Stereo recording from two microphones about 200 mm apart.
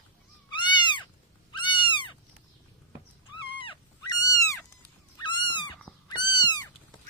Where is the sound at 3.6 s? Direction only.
25° left (ahead or behind).